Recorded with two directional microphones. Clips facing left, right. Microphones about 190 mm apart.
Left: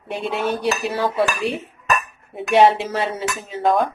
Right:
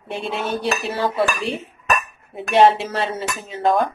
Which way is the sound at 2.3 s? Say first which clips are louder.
Left 2 dB; centre (ahead or behind).